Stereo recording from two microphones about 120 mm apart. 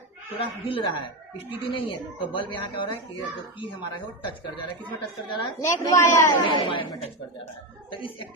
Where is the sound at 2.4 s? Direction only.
45° left (ahead or behind).